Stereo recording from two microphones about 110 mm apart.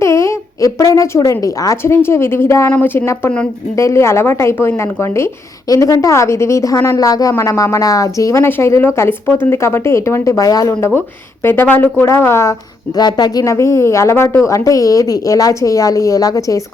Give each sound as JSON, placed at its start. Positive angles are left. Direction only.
{"t": 0.0, "sound": "a woman's voice", "side_deg": 25}
{"t": 13.0, "sound": "a woman's voice", "side_deg": 40}